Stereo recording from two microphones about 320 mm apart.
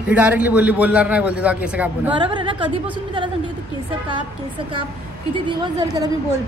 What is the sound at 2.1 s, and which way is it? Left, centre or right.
Speech, centre.